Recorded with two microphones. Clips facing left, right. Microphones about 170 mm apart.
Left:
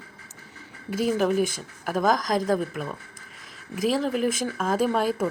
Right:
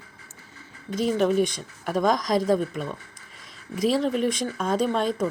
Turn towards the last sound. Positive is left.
turn(degrees=5)  # may be behind; listen again after turning